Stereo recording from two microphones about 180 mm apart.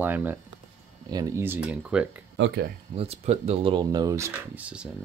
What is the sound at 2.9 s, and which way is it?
Speech, 35° right (ahead or behind).